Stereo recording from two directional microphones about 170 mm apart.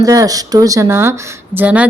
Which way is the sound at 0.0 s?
20° right (ahead or behind).